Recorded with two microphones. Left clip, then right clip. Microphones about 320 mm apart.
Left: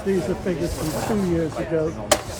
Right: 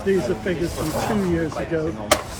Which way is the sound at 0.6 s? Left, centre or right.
Right.